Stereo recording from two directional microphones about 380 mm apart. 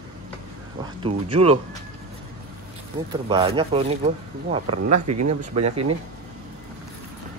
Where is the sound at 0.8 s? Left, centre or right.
Centre.